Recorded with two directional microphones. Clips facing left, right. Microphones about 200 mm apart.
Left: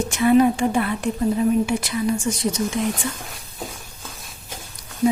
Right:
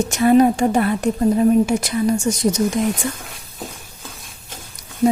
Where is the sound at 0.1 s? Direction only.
40° right (ahead or behind).